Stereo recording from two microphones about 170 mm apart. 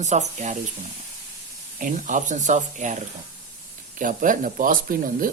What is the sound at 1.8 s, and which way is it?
Speech, 50° right (ahead or behind).